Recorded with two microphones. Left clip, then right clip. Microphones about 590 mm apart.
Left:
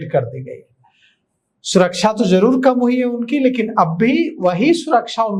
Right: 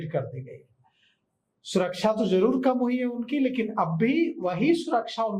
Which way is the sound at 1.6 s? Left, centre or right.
Left.